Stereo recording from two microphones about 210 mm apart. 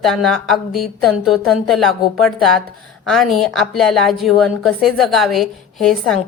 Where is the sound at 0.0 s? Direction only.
Centre (ahead or behind).